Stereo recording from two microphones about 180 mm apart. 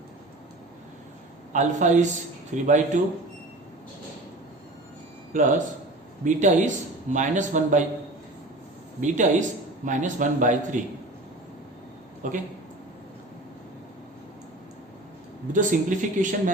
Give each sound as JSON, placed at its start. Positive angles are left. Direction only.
{"t": 1.5, "sound": "a man's voice", "side_deg": -40}
{"t": 5.3, "sound": "a man's voice", "side_deg": -45}
{"t": 9.0, "sound": "a man's voice", "side_deg": -45}
{"t": 12.2, "sound": "a man's voice", "side_deg": -45}
{"t": 15.5, "sound": "a man's voice", "side_deg": -45}